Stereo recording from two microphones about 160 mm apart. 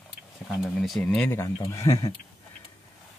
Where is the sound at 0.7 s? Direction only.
5° left (ahead or behind); by 2.1 s 20° left (ahead or behind).